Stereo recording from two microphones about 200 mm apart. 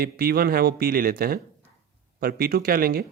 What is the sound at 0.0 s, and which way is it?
Speech, 50° right (ahead or behind).